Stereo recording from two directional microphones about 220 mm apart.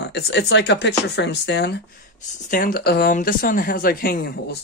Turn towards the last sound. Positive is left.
turn(degrees=45)  # may be behind; listen again after turning